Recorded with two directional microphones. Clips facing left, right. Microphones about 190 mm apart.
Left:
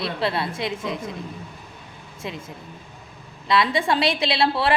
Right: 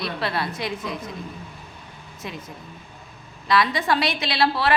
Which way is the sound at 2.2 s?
25° left (ahead or behind).